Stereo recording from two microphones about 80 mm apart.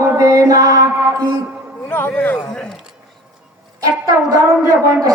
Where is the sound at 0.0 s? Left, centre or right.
Right.